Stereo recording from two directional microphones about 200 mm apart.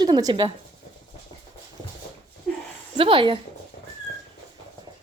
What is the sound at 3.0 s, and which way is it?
Speech, 25° right (ahead or behind).